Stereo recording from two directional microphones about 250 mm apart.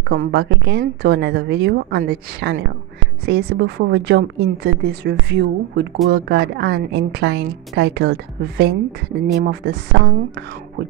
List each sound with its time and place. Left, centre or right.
0.1 s a woman's voice: right